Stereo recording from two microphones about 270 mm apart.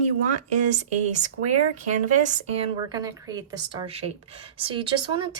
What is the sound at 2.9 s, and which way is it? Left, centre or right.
Speech, centre.